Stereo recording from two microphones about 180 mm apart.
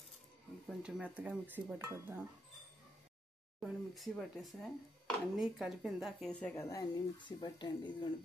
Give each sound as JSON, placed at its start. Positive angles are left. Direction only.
{"t": 0.7, "sound": "speech", "side_deg": -5}
{"t": 3.6, "sound": "speech", "side_deg": 0}
{"t": 6.5, "sound": "speech", "side_deg": 15}